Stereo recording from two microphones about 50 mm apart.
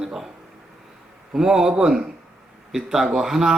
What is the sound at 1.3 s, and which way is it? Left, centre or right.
Speech, centre.